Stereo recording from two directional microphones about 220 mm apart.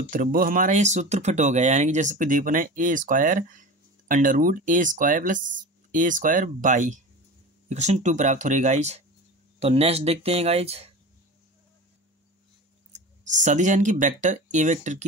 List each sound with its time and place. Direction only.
0.1 s speech: 40° right (ahead or behind)
12.9 s speech: 35° right (ahead or behind)